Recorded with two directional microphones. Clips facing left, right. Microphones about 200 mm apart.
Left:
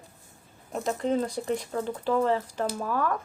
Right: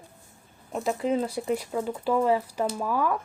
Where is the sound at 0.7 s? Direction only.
5° right (ahead or behind).